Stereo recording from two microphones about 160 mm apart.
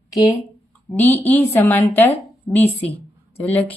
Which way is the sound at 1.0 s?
10° left (ahead or behind).